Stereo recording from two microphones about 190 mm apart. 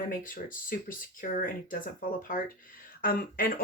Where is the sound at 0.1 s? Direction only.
45° left (ahead or behind).